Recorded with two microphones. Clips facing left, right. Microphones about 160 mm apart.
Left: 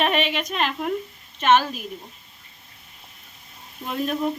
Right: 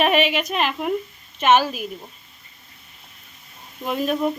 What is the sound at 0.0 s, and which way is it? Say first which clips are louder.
Speech: right 4 dB; 10° right (ahead or behind).